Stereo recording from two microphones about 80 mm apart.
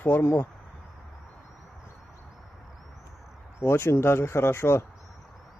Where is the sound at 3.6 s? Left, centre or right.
Left.